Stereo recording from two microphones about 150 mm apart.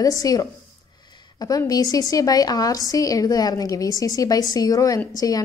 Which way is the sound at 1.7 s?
25° left (ahead or behind).